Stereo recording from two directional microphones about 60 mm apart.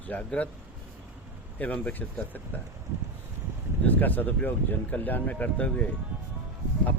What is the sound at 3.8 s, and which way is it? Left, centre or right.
Speech, left.